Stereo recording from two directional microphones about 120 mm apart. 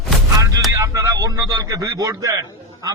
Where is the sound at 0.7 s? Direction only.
25° right (ahead or behind).